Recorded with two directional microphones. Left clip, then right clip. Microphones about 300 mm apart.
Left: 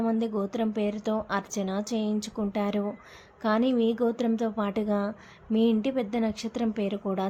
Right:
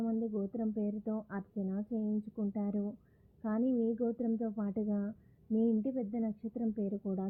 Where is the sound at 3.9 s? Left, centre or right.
Centre.